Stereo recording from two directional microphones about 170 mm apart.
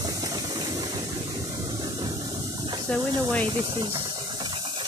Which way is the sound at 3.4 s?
30° right (ahead or behind).